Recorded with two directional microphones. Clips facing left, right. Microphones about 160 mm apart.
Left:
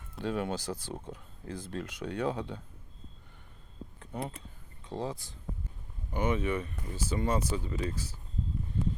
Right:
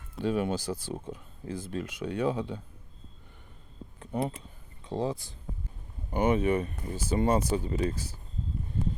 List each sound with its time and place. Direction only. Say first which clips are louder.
0.2 s speech: right 4 dB; 15° right (ahead or behind)
4.0 s speech: right 7 dB; 25° right (ahead or behind)
6.1 s speech: right 5 dB; 50° right (ahead or behind)